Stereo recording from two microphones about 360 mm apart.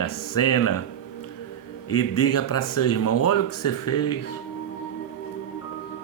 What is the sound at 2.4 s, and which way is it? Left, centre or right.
Speech, left.